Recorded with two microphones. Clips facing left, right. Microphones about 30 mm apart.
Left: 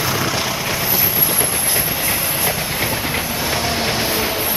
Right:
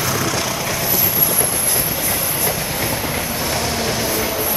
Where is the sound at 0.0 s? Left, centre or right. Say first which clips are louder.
Left 1 dB; centre.